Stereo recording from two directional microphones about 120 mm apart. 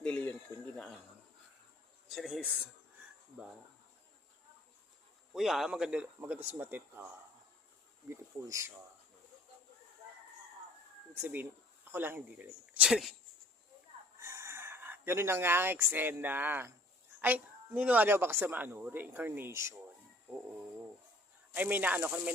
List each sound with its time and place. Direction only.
0.0 s a sound: 15° left (ahead or behind)
2.0 s speech: centre (ahead or behind)
5.3 s speech: centre (ahead or behind); by 7.1 s 15° right (ahead or behind)
8.1 s speech: 25° right (ahead or behind)
11.1 s speech: 15° right (ahead or behind)
14.2 s speech: 25° right (ahead or behind)
21.5 s speech: 15° right (ahead or behind)